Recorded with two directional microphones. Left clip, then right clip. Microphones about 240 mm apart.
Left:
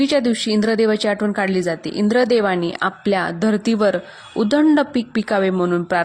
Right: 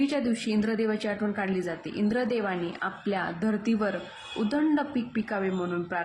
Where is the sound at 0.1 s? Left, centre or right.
Left.